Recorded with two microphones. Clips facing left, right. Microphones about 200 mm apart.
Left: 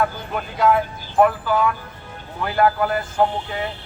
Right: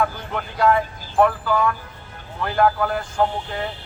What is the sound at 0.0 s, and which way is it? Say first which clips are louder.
Vehicle: left 1 dB; 5° left (ahead or behind).